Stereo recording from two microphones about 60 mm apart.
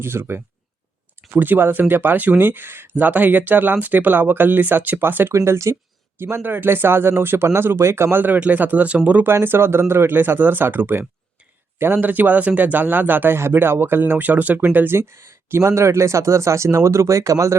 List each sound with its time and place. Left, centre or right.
0.0 s speech: right
5.3 s speech: right
6.1 s speech: right
8.2 s speech: right
9.2 s speech: right
14.9 s speech: right